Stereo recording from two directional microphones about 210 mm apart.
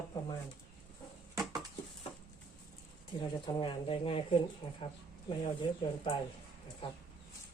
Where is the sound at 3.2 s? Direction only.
25° left (ahead or behind).